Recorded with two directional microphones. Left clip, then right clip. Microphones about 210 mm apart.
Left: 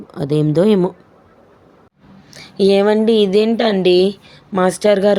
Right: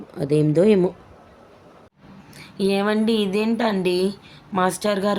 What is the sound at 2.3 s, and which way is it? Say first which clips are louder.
A woman's voice: left 9 dB; 20° left (ahead or behind).